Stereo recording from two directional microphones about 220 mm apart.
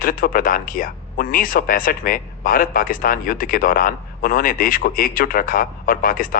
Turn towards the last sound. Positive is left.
turn(degrees=40)  # may be behind; listen again after turning